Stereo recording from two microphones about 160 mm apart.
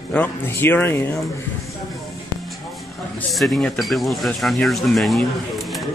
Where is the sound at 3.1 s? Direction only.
Centre (ahead or behind).